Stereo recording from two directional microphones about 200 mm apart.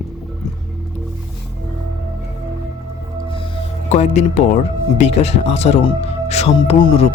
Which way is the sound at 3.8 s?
35° left (ahead or behind).